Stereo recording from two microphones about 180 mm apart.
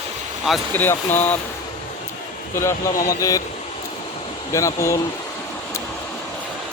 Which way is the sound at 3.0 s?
20° left (ahead or behind).